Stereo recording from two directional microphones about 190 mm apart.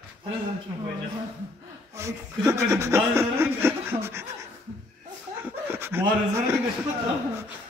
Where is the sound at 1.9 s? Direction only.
15° right (ahead or behind).